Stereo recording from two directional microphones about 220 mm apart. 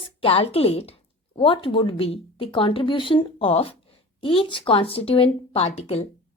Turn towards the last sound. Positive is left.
turn(degrees=30)  # may be behind; listen again after turning